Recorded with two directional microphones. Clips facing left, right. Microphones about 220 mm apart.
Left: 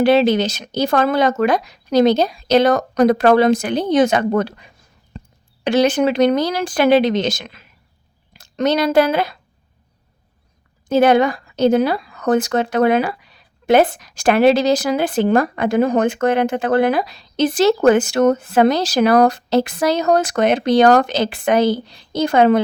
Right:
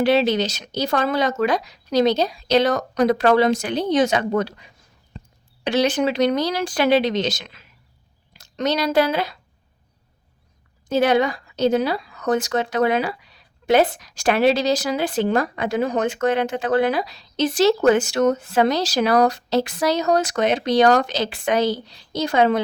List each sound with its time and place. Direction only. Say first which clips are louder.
0.0 s speech: left 4 dB; 50° left (ahead or behind)
10.8 s speech: left 5 dB; 50° left (ahead or behind)